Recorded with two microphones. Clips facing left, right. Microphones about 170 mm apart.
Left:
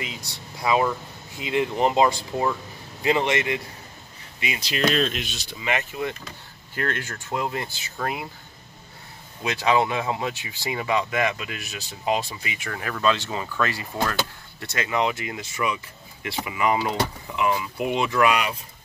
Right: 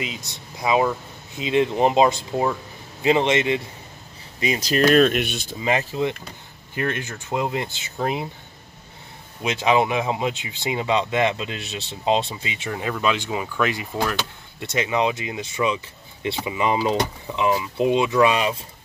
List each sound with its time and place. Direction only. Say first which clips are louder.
0.0 s speech: right 4 dB; 20° right (ahead or behind)
4.4 s speech: right 6 dB; 40° right (ahead or behind)
5.6 s speech: right 5 dB; 35° right (ahead or behind)
6.7 s speech: right 2 dB; 15° right (ahead or behind)
9.4 s speech: right 2 dB; 20° right (ahead or behind)